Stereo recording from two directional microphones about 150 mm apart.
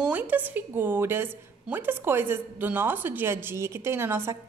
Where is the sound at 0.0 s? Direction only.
10° right (ahead or behind).